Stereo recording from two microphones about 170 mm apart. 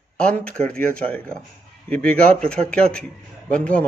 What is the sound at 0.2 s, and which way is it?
A man's voice, 5° left (ahead or behind).